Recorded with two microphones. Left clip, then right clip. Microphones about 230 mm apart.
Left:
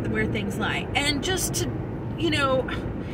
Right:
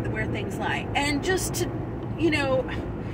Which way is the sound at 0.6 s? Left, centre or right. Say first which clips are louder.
Even; centre.